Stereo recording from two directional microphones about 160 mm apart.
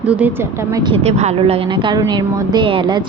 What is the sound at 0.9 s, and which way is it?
Speech, 45° right (ahead or behind).